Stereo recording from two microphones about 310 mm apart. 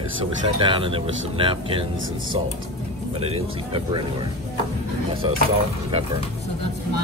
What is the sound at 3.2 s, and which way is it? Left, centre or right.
Speech, centre.